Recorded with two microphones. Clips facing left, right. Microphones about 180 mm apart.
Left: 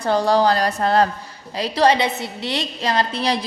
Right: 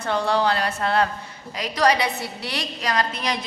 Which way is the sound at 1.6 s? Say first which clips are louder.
Left 4 dB; 25° left (ahead or behind).